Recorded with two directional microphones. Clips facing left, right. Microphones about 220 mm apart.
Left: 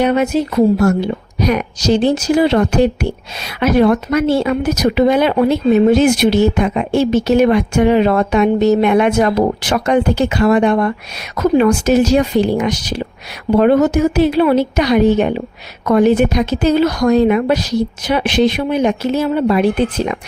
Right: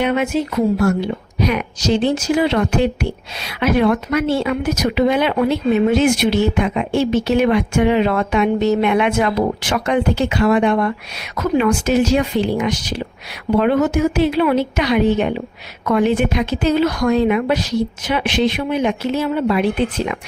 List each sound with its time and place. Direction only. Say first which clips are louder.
0.0 s a woman's voice: left 4 dB; 40° left (ahead or behind)